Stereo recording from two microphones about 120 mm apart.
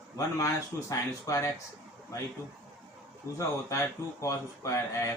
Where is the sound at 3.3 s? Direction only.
25° left (ahead or behind).